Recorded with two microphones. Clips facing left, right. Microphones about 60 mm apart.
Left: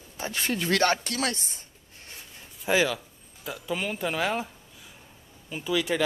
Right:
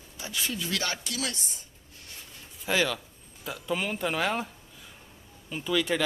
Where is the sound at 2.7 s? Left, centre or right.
Centre.